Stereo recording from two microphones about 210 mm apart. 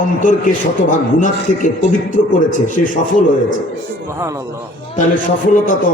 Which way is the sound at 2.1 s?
40° left (ahead or behind).